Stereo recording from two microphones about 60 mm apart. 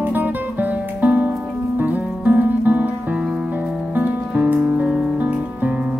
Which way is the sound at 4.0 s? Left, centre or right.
Right.